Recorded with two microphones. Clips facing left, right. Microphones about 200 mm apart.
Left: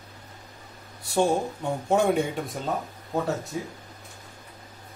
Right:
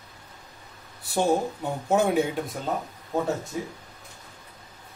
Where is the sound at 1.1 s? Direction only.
5° right (ahead or behind).